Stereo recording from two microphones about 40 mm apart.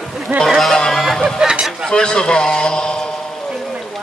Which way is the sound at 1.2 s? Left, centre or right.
Centre.